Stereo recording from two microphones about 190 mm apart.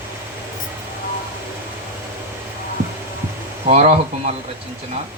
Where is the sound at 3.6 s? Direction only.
35° right (ahead or behind).